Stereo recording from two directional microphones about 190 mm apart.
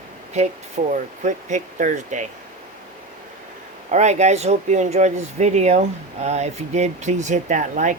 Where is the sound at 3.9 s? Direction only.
35° right (ahead or behind).